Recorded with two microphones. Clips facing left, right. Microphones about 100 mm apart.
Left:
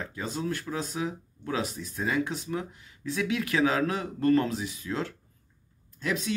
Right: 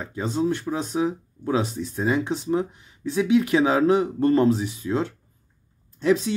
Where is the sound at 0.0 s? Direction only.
25° right (ahead or behind).